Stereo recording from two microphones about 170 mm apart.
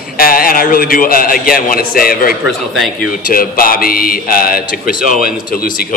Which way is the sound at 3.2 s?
55° left (ahead or behind).